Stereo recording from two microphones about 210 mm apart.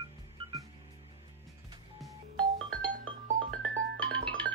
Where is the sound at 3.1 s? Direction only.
70° right (ahead or behind).